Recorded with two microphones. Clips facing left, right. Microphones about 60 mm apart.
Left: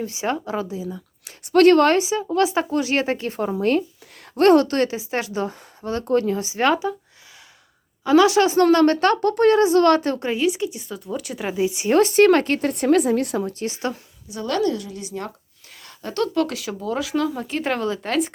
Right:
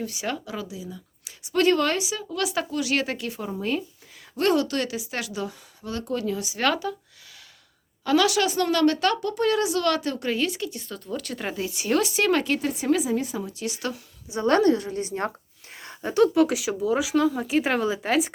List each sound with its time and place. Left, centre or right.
0.0 s a woman's voice: left
1.2 s a woman's voice: left
8.0 s a woman's voice: left
8.6 s a woman's voice: left
10.2 s speech: centre
11.6 s a woman's voice: left
11.9 s speech: left
13.5 s a woman's voice: left
14.3 s a woman's voice: right; by 18.3 s centre